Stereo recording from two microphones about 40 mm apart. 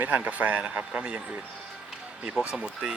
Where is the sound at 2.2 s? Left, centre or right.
Right.